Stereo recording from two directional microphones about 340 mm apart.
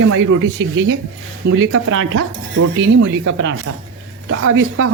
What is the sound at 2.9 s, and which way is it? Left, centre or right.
Speech, right.